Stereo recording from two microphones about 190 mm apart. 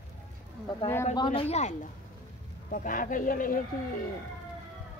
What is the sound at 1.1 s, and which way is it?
Speech, 25° left (ahead or behind).